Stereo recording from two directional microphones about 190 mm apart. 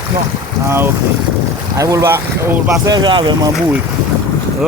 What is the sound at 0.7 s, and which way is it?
Speech, 15° right (ahead or behind).